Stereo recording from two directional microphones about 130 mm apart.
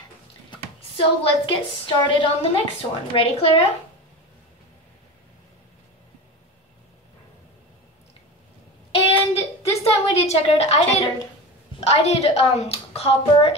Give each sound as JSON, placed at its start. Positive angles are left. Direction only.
{"t": 0.9, "sound": "a woman's voice", "side_deg": 40}
{"t": 8.9, "sound": "a sound", "side_deg": 50}
{"t": 11.8, "sound": "a woman's voice", "side_deg": 55}